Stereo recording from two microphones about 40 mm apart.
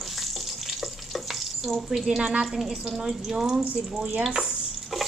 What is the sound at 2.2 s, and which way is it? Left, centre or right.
Speech, right.